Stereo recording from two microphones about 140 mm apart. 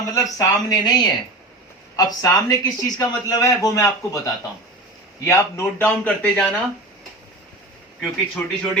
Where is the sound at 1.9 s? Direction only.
25° left (ahead or behind).